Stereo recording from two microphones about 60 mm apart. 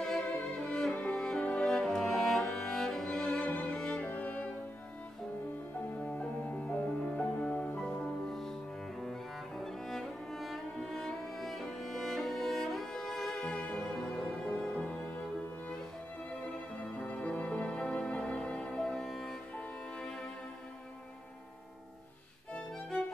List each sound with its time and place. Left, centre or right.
0.0 s music: centre
3.4 s cello: left
4.0 s music: left
6.0 s music: left
6.9 s music: centre
7.2 s music: left
8.0 s music: centre
9.6 s music: centre
13.4 s music: left
16.7 s music: centre
22.5 s violin: centre